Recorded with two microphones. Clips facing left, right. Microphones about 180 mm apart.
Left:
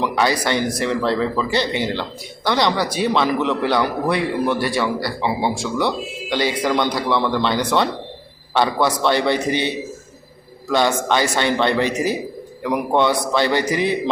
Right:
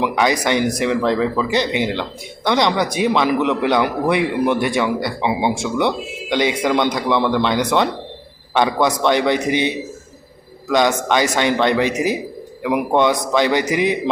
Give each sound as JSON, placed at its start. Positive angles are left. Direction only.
{"t": 0.0, "sound": "a man's voice", "side_deg": -15}